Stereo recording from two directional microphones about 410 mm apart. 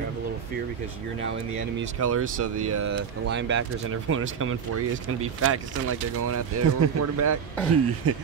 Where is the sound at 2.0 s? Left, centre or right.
Right.